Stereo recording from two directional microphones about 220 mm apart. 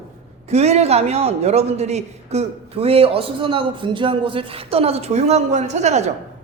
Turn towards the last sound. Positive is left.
turn(degrees=-30)  # may be behind; listen again after turning